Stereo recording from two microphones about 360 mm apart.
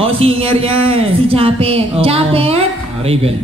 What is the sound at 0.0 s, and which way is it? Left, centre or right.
A man's voice, centre.